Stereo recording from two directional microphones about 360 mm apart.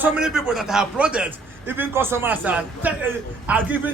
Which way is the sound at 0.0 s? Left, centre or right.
Centre.